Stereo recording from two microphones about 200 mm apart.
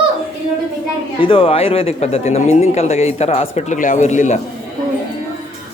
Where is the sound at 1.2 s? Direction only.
25° left (ahead or behind).